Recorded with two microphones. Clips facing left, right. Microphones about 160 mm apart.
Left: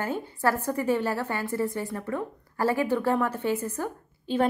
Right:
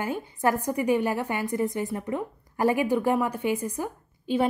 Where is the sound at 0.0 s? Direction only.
15° right (ahead or behind).